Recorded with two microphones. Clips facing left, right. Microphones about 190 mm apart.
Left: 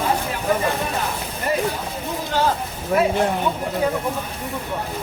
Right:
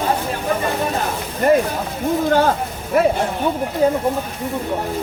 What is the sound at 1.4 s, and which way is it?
Speech, 50° right (ahead or behind).